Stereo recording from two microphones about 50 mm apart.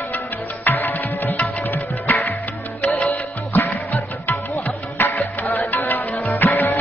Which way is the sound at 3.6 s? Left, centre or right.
Left.